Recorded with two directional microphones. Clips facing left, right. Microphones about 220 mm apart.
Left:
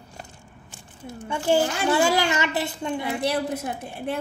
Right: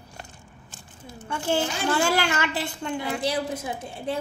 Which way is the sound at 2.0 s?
15° left (ahead or behind).